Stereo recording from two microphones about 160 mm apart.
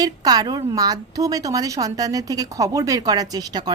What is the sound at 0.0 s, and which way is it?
A woman's voice, 25° right (ahead or behind).